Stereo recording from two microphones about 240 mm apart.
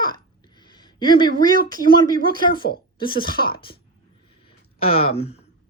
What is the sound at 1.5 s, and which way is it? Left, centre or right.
Speech, right.